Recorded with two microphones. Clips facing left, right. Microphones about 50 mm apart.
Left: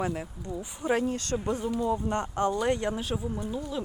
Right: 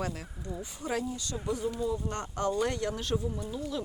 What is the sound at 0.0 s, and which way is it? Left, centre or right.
Speech, left.